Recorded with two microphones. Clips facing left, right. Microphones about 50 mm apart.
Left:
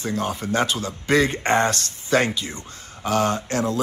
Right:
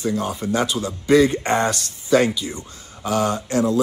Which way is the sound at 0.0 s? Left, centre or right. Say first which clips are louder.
Right 2 dB; left.